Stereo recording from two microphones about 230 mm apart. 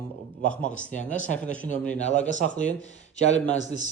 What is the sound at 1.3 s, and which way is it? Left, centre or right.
Speech, centre.